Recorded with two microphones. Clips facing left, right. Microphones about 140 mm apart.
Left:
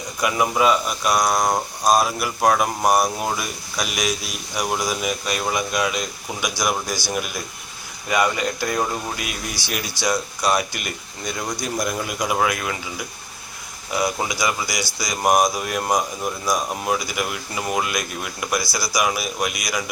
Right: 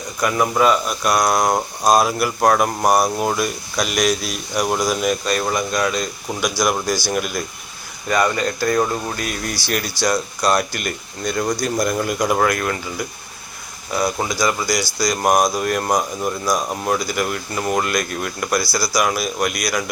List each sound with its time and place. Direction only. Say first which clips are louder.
0.2 s speech: right 2 dB; 5° left (ahead or behind)
18.6 s speech: right 5 dB; 20° left (ahead or behind)
18.9 s speech: right 2 dB; 5° left (ahead or behind)